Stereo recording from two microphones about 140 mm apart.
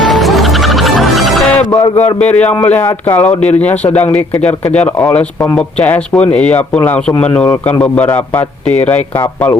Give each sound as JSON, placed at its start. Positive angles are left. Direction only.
{"t": 0.0, "sound": "music", "side_deg": 0}
{"t": 1.7, "sound": "speech", "side_deg": 30}
{"t": 2.0, "sound": "speech", "side_deg": 10}
{"t": 5.1, "sound": "speech", "side_deg": 10}